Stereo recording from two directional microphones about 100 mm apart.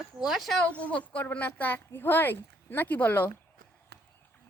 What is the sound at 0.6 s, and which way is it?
Speech, 15° left (ahead or behind).